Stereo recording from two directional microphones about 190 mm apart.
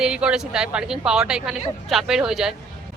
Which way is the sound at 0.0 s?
5° right (ahead or behind).